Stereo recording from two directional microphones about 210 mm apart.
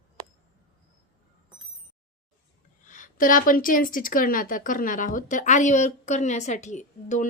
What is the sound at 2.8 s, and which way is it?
Speech, 40° left (ahead or behind).